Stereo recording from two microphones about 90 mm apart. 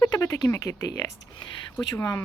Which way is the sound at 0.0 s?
45° left (ahead or behind).